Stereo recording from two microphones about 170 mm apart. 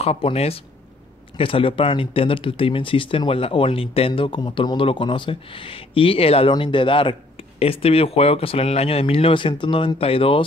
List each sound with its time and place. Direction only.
0.0 s speech: 35° left (ahead or behind)